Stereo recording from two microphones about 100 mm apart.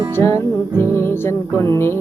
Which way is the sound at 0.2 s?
30° left (ahead or behind).